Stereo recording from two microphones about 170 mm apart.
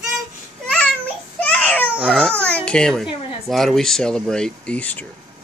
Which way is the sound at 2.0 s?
5° right (ahead or behind).